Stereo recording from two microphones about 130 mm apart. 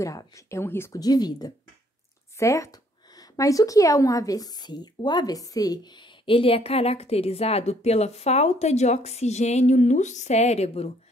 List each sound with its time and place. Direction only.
0.0 s speech: 25° left (ahead or behind)
1.0 s a woman's voice: 30° left (ahead or behind)
6.2 s speech: 45° left (ahead or behind)